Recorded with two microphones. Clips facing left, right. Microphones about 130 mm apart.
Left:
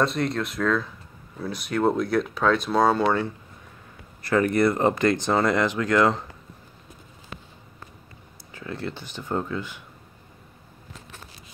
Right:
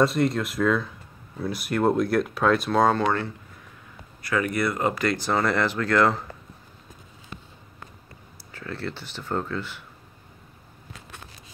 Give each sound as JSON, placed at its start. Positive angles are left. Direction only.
{"t": 0.0, "sound": "speech", "side_deg": 0}
{"t": 4.3, "sound": "speech", "side_deg": 35}
{"t": 4.6, "sound": "speech", "side_deg": 25}
{"t": 8.5, "sound": "speech", "side_deg": 20}